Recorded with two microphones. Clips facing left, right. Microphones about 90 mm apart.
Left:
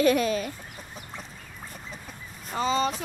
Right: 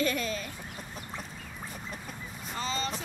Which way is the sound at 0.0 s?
70° left (ahead or behind).